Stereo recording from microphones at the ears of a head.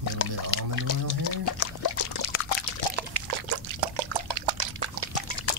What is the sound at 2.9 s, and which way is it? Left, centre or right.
Liquid, right.